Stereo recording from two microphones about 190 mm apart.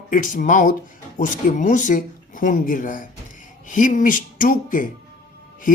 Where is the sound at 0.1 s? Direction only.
45° left (ahead or behind).